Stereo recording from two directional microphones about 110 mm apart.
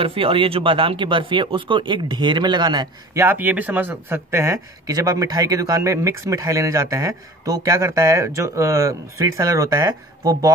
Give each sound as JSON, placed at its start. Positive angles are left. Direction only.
{"t": 0.0, "sound": "speech", "side_deg": -55}
{"t": 3.2, "sound": "speech", "side_deg": -20}